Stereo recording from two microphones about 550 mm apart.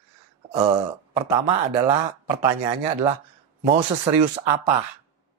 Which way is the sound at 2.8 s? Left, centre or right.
Right.